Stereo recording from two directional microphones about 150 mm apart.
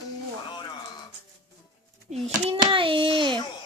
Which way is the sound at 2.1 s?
40° right (ahead or behind).